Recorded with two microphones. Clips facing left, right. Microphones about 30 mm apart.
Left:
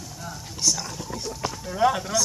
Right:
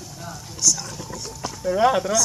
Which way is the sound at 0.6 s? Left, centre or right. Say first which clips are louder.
Right 2 dB; left.